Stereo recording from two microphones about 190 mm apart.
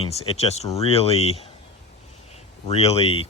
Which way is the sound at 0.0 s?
30° left (ahead or behind).